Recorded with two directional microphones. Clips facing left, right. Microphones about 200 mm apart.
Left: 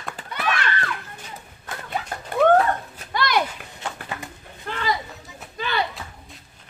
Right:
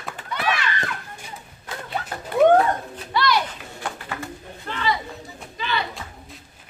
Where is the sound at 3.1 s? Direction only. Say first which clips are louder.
Right 2 dB; 50° left (ahead or behind).